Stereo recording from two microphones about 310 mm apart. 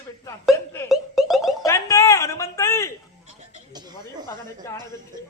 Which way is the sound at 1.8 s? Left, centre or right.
Centre.